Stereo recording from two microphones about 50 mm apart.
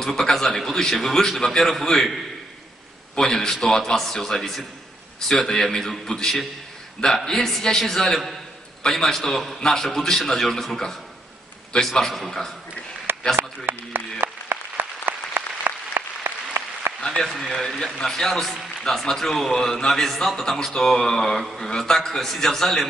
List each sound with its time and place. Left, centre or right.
0.0 s a man's voice: centre
3.2 s a man's voice: centre
13.4 s a sound: right
14.2 s applause: right
17.0 s a man's voice: centre